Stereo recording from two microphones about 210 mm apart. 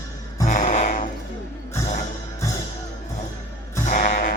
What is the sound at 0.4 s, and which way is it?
Music, 35° left (ahead or behind).